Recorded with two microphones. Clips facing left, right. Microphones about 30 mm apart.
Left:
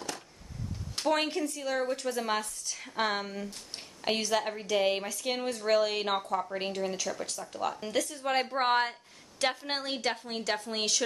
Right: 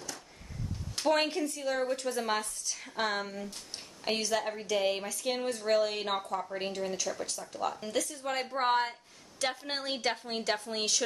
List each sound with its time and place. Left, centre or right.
1.0 s a woman's voice: centre; by 8.9 s left
9.4 s a woman's voice: left
9.8 s a woman's voice: centre
10.6 s speech: centre